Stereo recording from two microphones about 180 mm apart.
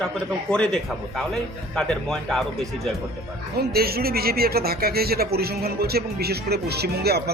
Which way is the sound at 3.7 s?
60° right (ahead or behind).